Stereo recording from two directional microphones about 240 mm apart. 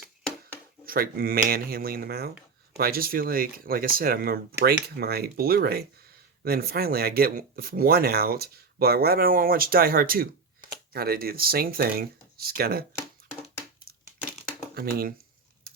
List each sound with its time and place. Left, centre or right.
0.9 s speech: right
14.8 s speech: right